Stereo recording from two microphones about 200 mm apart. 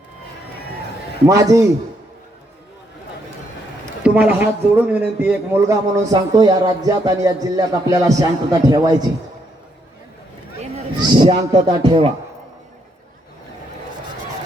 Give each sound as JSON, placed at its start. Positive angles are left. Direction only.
{"t": 1.3, "sound": "a man's voice", "side_deg": -15}
{"t": 4.0, "sound": "a man's voice", "side_deg": -10}
{"t": 10.6, "sound": "a man's voice", "side_deg": -30}